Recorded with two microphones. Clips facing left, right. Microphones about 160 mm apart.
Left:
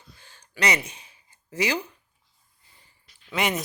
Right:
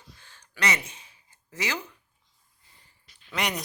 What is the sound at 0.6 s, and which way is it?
Speech, 15° left (ahead or behind).